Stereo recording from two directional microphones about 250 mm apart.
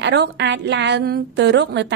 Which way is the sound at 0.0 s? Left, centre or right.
Right.